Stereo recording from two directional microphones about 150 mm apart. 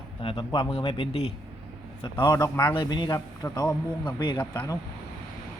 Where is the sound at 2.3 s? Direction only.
20° left (ahead or behind).